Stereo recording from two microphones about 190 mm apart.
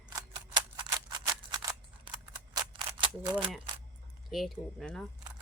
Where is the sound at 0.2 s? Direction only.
20° right (ahead or behind).